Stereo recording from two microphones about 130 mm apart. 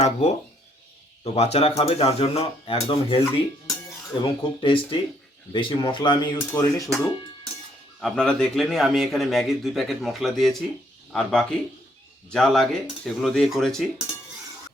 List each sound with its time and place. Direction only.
0.0 s speech: 60° left (ahead or behind); by 6.9 s 25° left (ahead or behind)
8.0 s speech: 5° left (ahead or behind)